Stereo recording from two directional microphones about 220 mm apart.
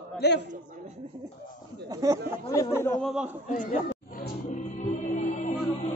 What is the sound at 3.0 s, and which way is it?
Speech, 5° right (ahead or behind).